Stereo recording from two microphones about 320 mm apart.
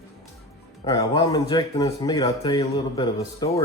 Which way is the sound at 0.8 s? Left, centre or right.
Centre.